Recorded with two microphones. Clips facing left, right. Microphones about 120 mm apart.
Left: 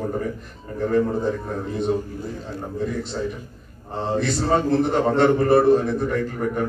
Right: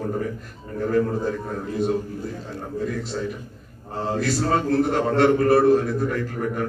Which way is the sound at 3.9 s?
5° right (ahead or behind).